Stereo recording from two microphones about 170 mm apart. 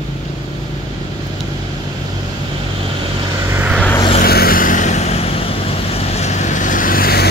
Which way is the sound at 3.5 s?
10° right (ahead or behind).